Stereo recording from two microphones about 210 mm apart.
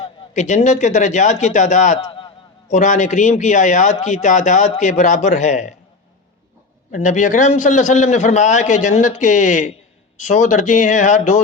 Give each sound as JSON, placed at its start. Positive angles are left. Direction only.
{"t": 0.0, "sound": "a man's voice", "side_deg": 35}
{"t": 6.9, "sound": "a man's voice", "side_deg": 35}